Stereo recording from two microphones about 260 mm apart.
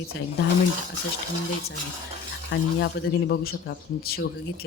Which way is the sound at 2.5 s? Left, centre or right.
Left.